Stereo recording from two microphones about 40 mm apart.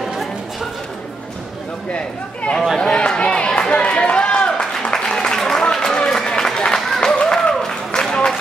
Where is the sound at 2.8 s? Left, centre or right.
Left.